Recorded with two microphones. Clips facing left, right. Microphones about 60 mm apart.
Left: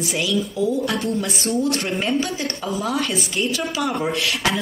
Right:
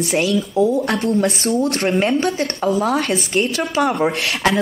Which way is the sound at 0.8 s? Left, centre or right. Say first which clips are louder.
Right 3 dB; right.